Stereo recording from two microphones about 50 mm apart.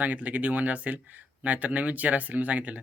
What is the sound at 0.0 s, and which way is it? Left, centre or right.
Speech, right.